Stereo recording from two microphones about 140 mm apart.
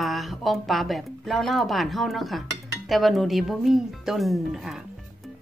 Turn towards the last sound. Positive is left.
turn(degrees=-5)  # may be behind; listen again after turning